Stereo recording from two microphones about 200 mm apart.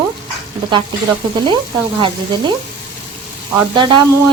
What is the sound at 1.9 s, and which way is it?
Speech, 25° right (ahead or behind).